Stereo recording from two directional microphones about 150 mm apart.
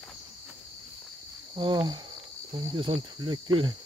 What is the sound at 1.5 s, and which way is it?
Cricket, 30° right (ahead or behind).